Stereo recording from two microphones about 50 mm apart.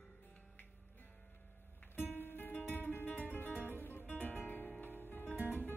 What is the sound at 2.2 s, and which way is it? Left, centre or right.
Music, left.